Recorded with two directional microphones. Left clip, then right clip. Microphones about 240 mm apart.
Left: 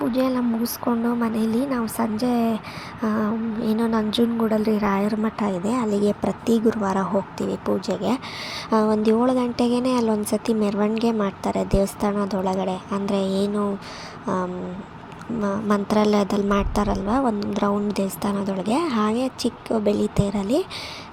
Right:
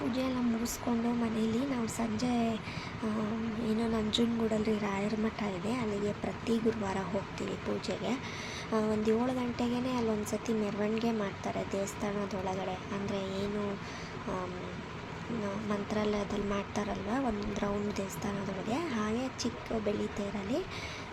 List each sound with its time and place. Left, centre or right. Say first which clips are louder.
0.1 s a woman's voice: left 11 dB; left
15.4 s a woman's voice: left 14 dB; left